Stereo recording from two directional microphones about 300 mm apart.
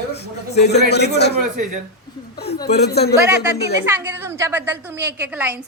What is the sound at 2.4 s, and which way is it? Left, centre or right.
Speech, left.